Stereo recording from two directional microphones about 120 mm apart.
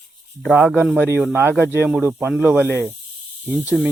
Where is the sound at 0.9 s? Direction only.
20° right (ahead or behind).